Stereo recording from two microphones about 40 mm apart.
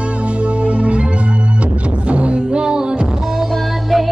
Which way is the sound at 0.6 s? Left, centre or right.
Right.